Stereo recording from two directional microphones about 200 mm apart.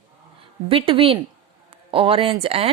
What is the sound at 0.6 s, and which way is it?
A woman's voice, 25° right (ahead or behind).